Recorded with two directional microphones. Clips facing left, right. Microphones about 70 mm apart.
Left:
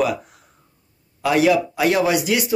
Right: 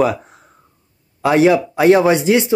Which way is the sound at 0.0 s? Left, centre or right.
Right.